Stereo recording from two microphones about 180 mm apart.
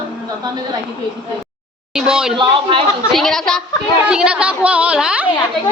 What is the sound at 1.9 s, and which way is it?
Speech, 5° right (ahead or behind).